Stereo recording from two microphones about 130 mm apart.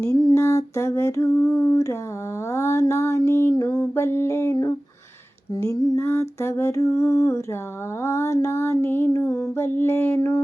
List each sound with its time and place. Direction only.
0.3 s music: 25° left (ahead or behind)
5.6 s music: 30° left (ahead or behind)